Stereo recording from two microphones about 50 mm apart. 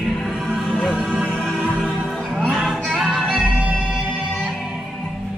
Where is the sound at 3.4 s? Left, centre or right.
Right.